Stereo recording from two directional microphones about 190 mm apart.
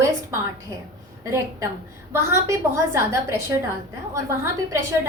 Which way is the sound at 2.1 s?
15° right (ahead or behind).